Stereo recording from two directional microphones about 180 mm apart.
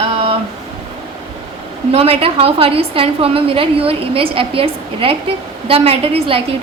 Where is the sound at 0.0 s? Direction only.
35° right (ahead or behind).